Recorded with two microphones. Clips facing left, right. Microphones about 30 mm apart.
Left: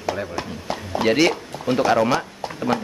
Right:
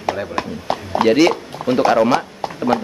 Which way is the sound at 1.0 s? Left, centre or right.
Centre.